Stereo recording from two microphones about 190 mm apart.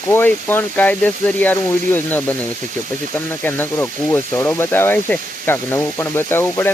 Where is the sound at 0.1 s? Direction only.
10° left (ahead or behind).